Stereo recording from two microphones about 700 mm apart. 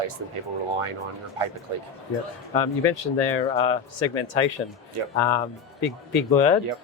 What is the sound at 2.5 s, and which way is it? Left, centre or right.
Speech, left.